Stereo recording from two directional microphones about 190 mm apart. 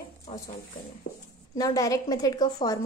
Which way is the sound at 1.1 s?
60° left (ahead or behind).